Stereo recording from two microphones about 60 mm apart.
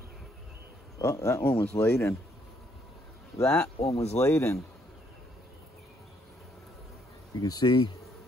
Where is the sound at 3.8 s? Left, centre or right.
Left.